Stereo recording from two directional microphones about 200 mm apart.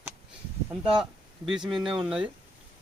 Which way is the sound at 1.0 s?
Centre (ahead or behind).